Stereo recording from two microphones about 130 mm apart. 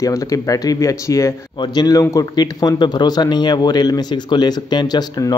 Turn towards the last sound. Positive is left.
turn(degrees=30)  # may be behind; listen again after turning